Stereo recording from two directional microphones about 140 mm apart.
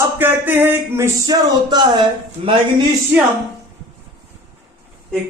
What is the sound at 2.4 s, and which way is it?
Speech, 45° right (ahead or behind).